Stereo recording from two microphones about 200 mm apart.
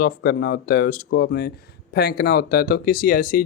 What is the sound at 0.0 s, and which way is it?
Speech, 50° left (ahead or behind).